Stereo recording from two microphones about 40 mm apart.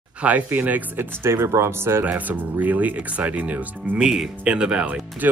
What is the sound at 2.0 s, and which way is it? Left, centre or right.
Speech, right.